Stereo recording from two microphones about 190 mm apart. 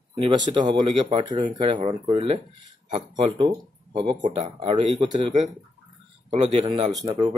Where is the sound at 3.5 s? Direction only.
25° right (ahead or behind).